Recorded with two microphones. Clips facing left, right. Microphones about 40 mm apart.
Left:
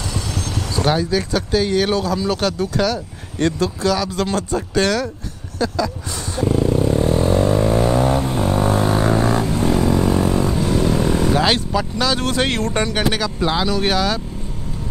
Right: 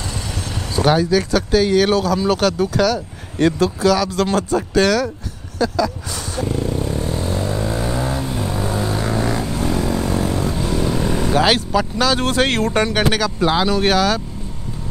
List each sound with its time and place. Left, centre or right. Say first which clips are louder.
0.1 s speech: left 2 dB; centre
6.3 s vehicle: left 5 dB; centre
7.0 s vehicle: left 6 dB; centre
8.2 s a sound: left 4 dB; centre
8.8 s music: left 4 dB; centre
9.5 s vehicle: left 3 dB; centre
12.0 s speech: right 2 dB; centre